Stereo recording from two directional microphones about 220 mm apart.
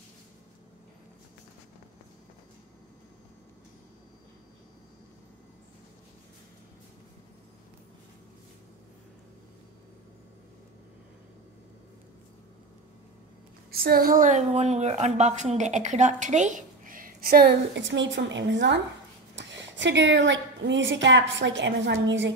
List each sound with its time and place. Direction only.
13.7 s a woman's voice: 40° right (ahead or behind)